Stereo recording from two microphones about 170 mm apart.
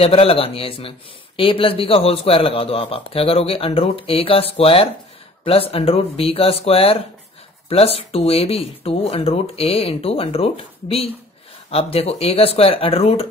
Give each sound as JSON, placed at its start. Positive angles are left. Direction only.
{"t": 0.0, "sound": "speech", "side_deg": 35}